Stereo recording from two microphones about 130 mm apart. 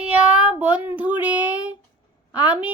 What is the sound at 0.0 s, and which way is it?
Child singing, 10° right (ahead or behind).